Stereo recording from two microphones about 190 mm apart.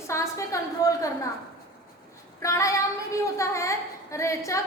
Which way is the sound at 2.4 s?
15° left (ahead or behind).